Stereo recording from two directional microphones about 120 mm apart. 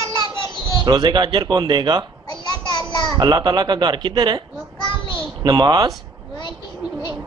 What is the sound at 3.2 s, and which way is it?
Speech, 35° right (ahead or behind).